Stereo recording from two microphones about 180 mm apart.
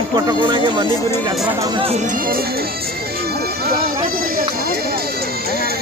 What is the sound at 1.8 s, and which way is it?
Speech, 35° right (ahead or behind).